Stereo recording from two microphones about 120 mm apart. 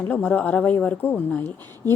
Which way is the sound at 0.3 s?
10° left (ahead or behind).